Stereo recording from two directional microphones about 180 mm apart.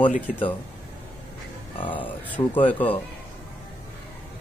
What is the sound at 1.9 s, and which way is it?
Speech, 10° left (ahead or behind).